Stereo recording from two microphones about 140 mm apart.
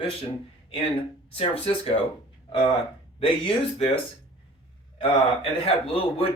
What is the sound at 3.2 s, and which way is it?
Speech, 40° left (ahead or behind).